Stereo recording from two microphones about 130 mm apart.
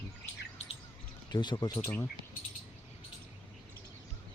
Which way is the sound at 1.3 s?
35° left (ahead or behind).